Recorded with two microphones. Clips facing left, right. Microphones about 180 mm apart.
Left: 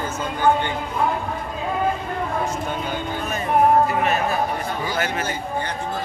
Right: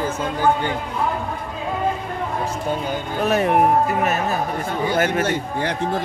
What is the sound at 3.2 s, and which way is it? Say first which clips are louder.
Speech: right 8 dB; 75° right (ahead or behind).